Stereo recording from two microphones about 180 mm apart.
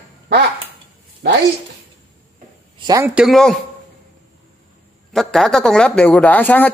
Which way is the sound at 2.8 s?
20° right (ahead or behind).